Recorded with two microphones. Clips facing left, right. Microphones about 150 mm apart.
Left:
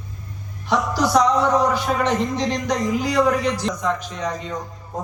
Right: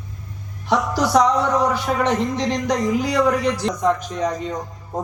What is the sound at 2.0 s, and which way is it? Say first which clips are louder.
Speech: right 1 dB; 65° right (ahead or behind).